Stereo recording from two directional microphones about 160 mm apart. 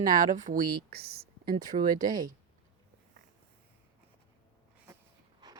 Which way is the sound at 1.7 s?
55° right (ahead or behind).